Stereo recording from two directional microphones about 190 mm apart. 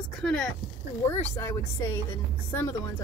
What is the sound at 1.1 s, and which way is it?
Speech, 15° left (ahead or behind).